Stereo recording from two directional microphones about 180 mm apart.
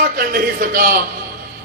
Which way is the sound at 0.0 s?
55° right (ahead or behind).